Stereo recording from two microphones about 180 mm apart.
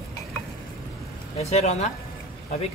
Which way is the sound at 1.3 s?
35° left (ahead or behind).